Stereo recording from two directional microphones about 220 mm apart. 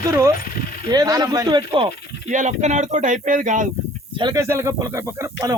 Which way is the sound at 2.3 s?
35° right (ahead or behind).